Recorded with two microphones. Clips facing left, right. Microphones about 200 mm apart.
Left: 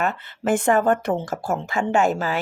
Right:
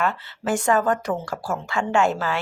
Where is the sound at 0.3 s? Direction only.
55° left (ahead or behind).